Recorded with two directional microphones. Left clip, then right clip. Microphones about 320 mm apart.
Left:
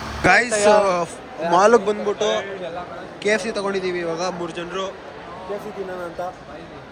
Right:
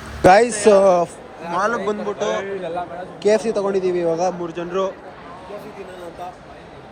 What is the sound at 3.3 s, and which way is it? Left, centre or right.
Speech, centre.